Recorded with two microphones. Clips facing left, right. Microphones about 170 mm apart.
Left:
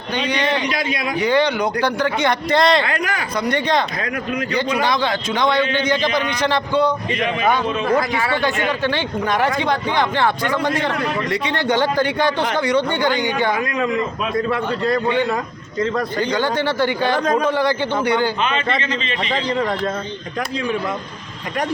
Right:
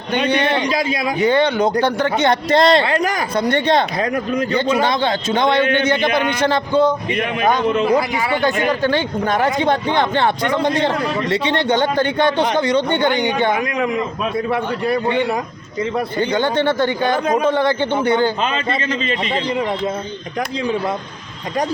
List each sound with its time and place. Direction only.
0.7 s a man's voice: 30° right (ahead or behind)
3.3 s a man's voice: 30° right (ahead or behind)
4.5 s a man's voice: 25° right (ahead or behind)
6.0 s speech: 55° right (ahead or behind)
6.5 s a man's voice: 20° right (ahead or behind)
7.2 s speech: 55° right (ahead or behind)
7.9 s speech: 15° right (ahead or behind)
8.8 s speech: 40° right (ahead or behind)
9.4 s a man's voice: 25° right (ahead or behind)
16.3 s a man's voice: 20° right (ahead or behind)
19.3 s speech: 10° right (ahead or behind)